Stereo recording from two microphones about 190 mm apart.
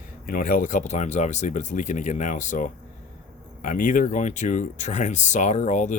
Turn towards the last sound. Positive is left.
turn(degrees=40)  # may be behind; listen again after turning